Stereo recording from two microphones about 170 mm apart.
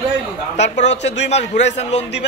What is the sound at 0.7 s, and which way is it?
A man's voice, 40° left (ahead or behind).